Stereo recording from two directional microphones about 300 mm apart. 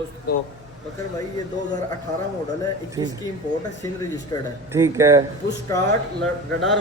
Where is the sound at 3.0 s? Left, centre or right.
Centre.